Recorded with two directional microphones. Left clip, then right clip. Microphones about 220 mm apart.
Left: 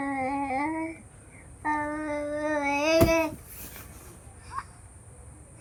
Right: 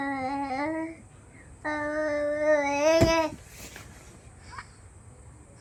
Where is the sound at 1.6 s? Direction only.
Centre (ahead or behind).